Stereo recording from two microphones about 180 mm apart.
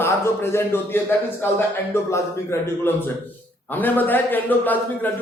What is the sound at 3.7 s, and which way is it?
A man's voice, 10° left (ahead or behind).